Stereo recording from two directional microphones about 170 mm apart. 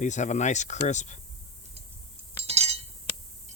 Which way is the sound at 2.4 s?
40° right (ahead or behind).